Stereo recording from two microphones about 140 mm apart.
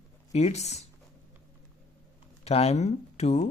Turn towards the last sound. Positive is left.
turn(degrees=50)  # may be behind; listen again after turning